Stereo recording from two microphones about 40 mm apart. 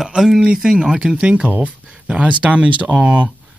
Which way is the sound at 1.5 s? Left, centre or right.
Right.